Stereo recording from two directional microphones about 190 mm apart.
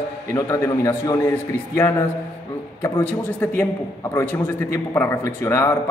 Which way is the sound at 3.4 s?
10° left (ahead or behind).